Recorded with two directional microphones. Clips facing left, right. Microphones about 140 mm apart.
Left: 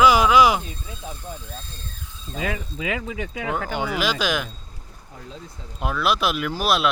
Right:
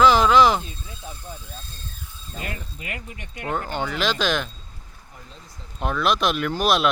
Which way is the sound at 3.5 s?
10° left (ahead or behind).